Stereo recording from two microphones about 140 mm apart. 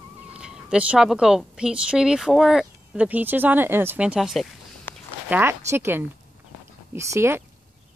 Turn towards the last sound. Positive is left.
turn(degrees=-20)  # may be behind; listen again after turning